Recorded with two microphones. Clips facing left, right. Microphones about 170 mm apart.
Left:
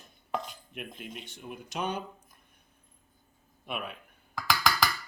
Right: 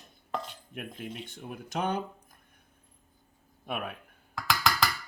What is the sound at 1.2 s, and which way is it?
Speech, 50° right (ahead or behind).